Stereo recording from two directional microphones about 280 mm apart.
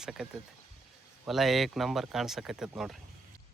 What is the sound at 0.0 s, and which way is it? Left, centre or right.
Speech, centre.